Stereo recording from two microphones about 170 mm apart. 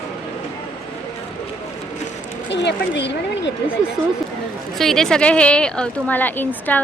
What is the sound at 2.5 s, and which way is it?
Speech, 90° left.